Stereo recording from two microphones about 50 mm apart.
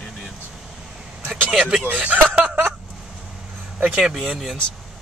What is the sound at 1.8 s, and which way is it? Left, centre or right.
Speech, right.